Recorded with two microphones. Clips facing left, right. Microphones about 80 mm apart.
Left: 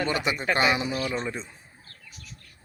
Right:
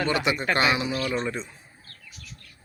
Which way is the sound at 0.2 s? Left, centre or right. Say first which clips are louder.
Right 1 dB; centre.